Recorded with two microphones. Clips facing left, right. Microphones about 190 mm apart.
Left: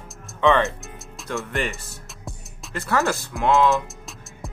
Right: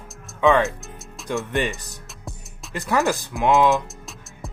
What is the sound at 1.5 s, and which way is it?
Speech, 15° right (ahead or behind).